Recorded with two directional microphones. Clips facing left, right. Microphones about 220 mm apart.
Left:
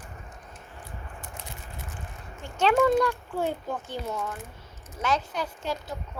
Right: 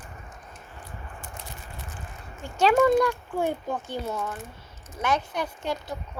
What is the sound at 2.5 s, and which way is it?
Speech, 10° right (ahead or behind).